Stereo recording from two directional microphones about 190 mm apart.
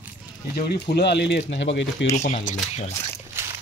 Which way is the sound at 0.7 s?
60° left (ahead or behind).